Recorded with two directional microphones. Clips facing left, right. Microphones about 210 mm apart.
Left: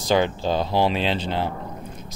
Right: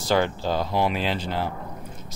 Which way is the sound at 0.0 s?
20° left (ahead or behind).